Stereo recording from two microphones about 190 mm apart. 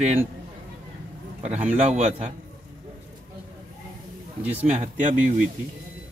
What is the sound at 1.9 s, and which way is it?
Speech, 35° right (ahead or behind).